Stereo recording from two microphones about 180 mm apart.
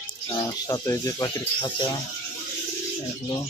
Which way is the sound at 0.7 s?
20° left (ahead or behind).